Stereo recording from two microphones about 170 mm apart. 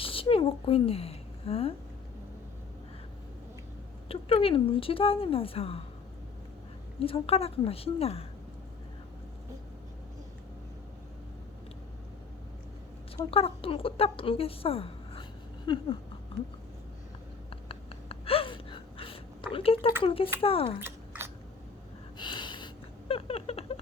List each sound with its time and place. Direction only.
0.0 s speech: 35° left (ahead or behind)
4.1 s speech: 35° left (ahead or behind)
7.0 s speech: 35° left (ahead or behind)
13.3 s speech: 35° left (ahead or behind)
15.6 s a sound: 25° left (ahead or behind)
17.5 s gasp: 35° left (ahead or behind)
19.5 s speech: 35° left (ahead or behind)
20.8 s chewing: 15° right (ahead or behind)
22.2 s a sound: 25° left (ahead or behind)